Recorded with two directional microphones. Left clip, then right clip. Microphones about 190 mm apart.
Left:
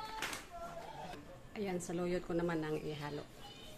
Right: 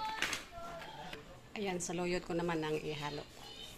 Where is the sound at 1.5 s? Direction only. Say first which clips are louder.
Right 2 dB; 5° left (ahead or behind).